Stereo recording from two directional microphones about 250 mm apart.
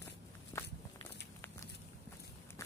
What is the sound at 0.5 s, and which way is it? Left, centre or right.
Walk, centre.